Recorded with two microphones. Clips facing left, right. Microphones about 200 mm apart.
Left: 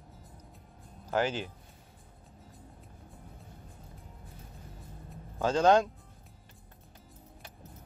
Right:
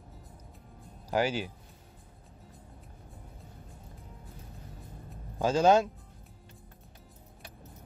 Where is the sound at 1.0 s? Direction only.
10° right (ahead or behind).